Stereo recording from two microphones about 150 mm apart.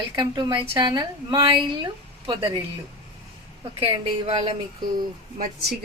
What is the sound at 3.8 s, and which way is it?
Speech, 40° right (ahead or behind).